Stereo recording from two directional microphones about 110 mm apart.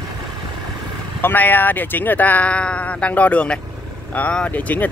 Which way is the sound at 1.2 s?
15° left (ahead or behind).